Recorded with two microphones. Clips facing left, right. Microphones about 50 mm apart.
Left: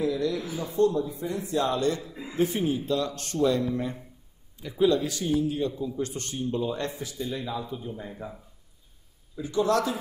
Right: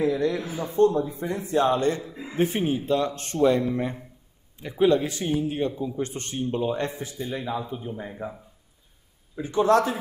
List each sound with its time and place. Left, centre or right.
0.0 s a man's voice: right
9.3 s a man's voice: right